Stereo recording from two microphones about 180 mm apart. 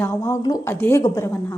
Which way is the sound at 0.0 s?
15° left (ahead or behind).